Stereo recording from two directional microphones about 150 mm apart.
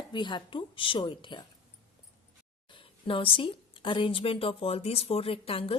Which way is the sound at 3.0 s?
35° left (ahead or behind).